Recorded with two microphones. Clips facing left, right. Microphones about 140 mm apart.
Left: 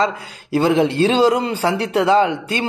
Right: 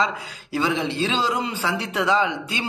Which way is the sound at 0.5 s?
55° left (ahead or behind).